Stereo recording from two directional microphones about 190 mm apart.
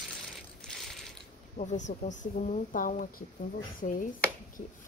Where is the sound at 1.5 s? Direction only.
40° left (ahead or behind).